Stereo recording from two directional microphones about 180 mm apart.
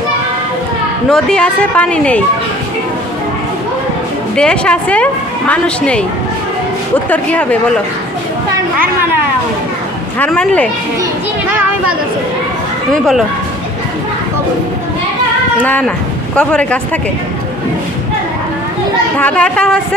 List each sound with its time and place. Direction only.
1.1 s speech: 5° left (ahead or behind)
4.4 s speech: 5° left (ahead or behind)
7.1 s speech: 10° left (ahead or behind)
10.1 s speech: 5° left (ahead or behind)
12.9 s speech: centre (ahead or behind)
16.3 s speech: 5° left (ahead or behind)
19.1 s speech: 5° left (ahead or behind)